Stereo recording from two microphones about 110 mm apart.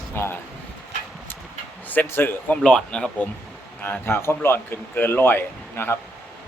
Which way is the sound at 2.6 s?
5° left (ahead or behind).